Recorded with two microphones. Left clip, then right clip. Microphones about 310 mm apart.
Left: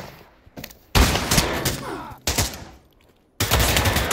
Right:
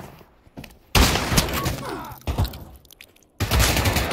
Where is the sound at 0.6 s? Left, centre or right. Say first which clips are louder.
Left 3 dB; centre.